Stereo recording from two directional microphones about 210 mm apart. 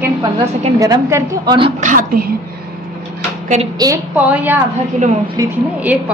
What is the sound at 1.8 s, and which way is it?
Speech, 40° right (ahead or behind).